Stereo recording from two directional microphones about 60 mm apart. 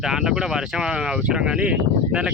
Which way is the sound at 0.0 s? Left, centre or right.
Centre.